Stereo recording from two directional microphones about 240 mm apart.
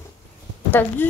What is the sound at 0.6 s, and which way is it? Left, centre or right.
Speech, centre.